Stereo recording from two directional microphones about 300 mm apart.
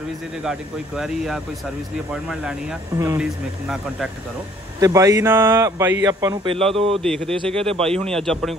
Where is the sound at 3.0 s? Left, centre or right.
Centre.